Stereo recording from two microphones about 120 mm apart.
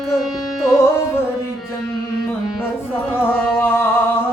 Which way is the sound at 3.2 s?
20° left (ahead or behind).